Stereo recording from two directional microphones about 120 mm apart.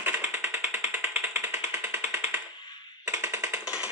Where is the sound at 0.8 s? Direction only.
20° right (ahead or behind).